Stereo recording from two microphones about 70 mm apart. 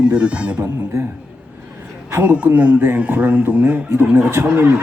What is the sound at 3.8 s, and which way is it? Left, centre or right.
Speech, right.